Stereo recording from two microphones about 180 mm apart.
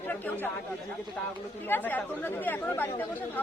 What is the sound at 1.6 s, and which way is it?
Speech, 10° left (ahead or behind).